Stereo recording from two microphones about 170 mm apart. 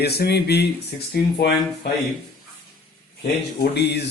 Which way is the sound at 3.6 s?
75° left (ahead or behind).